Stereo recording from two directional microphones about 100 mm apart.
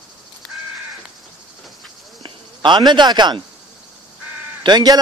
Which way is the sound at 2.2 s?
50° right (ahead or behind).